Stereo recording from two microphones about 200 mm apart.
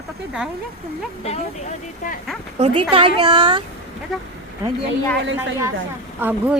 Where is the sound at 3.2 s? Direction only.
20° right (ahead or behind).